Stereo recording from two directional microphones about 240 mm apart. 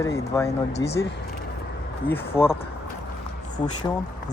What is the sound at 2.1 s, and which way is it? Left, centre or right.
Speech, centre.